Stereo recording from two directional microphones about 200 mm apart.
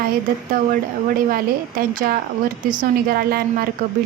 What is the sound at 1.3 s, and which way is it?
A woman's voice, 45° right (ahead or behind).